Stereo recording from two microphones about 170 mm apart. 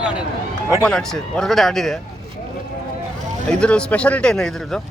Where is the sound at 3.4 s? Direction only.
5° left (ahead or behind).